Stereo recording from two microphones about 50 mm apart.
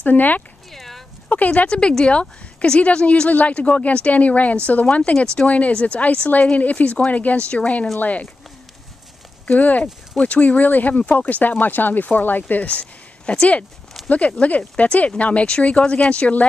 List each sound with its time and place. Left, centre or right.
0.0 s speech: left
0.7 s a sound: centre
1.3 s speech: left
1.7 s speech: centre
5.1 s speech: centre
9.5 s speech: left